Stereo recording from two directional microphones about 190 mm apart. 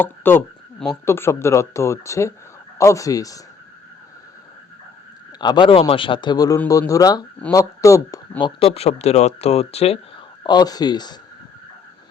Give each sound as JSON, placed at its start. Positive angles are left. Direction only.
{"t": 0.0, "sound": "speech", "side_deg": 10}
{"t": 5.4, "sound": "a man's voice", "side_deg": 25}
{"t": 10.4, "sound": "a man's voice", "side_deg": 20}